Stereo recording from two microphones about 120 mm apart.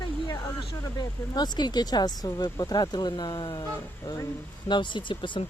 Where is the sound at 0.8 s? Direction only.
35° left (ahead or behind).